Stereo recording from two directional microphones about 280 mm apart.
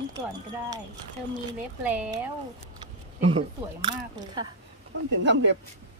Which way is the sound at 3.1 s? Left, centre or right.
Right.